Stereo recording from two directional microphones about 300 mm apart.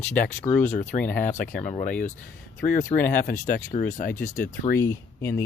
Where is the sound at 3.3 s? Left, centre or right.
Left.